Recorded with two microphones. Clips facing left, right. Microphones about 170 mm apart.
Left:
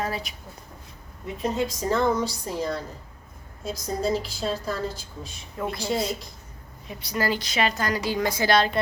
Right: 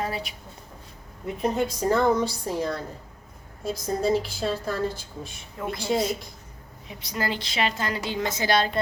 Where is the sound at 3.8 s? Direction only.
55° right (ahead or behind).